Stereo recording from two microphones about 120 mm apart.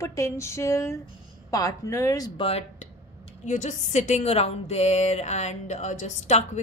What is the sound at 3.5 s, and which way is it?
A woman's voice, 85° left.